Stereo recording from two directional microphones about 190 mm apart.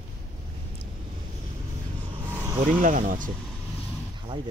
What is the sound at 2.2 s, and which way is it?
Vehicle, 15° right (ahead or behind).